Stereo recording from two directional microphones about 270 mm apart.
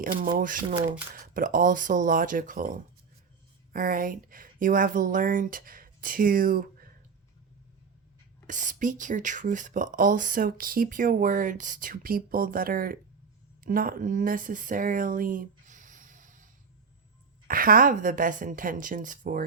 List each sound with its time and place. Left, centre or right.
0.0 s speech: right
8.4 s speech: right
17.5 s speech: right